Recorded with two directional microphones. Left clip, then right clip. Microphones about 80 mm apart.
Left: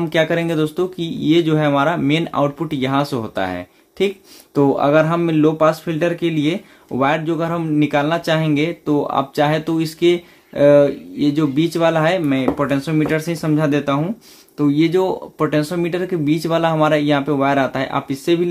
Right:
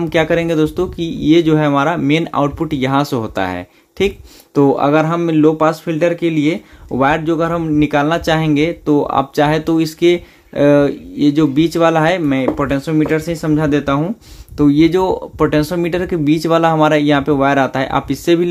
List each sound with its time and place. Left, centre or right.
0.0 s speech: right
4.6 s speech: right